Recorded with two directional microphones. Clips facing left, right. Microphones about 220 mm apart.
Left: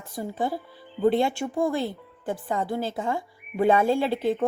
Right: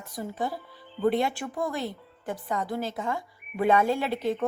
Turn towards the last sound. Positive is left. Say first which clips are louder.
# left 4 dB
turn(degrees=30)  # may be behind; listen again after turning